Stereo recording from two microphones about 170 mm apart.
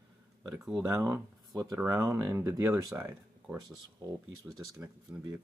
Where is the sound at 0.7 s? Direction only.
20° right (ahead or behind).